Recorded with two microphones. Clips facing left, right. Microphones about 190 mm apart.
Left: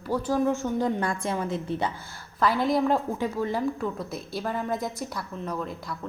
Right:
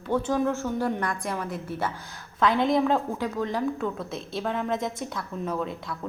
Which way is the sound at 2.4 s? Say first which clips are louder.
Right 1 dB; centre (ahead or behind).